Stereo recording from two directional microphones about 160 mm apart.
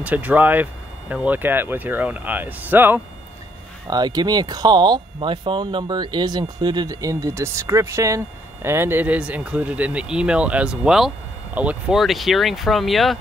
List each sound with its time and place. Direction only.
0.0 s speech: 10° right (ahead or behind)
3.8 s speech: 25° right (ahead or behind); by 13.2 s centre (ahead or behind)